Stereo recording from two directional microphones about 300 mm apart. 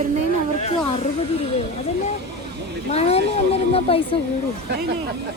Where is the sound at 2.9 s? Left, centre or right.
Left.